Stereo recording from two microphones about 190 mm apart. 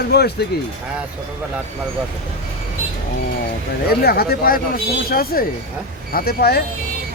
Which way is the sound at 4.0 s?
55° left (ahead or behind).